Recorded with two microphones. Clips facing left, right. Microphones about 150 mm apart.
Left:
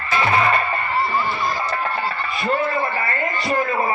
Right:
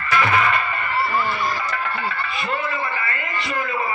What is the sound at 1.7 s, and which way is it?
Music, 35° left (ahead or behind).